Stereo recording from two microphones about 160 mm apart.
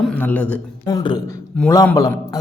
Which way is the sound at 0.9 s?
25° left (ahead or behind).